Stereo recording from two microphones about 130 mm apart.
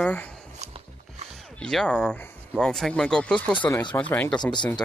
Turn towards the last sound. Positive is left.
turn(degrees=35)  # may be behind; listen again after turning